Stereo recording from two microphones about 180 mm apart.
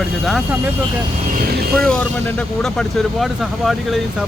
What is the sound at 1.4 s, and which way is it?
Speech, 55° right (ahead or behind).